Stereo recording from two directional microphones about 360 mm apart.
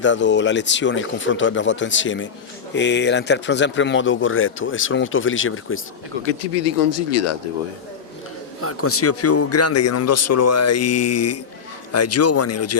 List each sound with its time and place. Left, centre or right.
0.0 s speech: left
6.9 s speech: left
8.6 s speech: left